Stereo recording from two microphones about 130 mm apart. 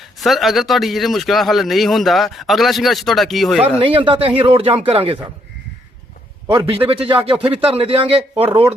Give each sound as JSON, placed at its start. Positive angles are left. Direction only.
{"t": 0.0, "sound": "speech", "side_deg": 0}
{"t": 3.8, "sound": "a man's voice", "side_deg": -45}
{"t": 6.8, "sound": "a man's voice", "side_deg": -45}